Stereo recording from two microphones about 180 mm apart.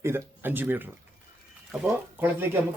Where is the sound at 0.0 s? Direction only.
10° right (ahead or behind).